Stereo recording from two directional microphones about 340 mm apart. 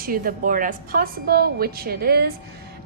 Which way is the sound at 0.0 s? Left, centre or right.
Right.